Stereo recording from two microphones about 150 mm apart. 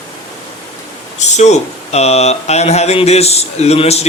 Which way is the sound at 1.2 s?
50° left (ahead or behind).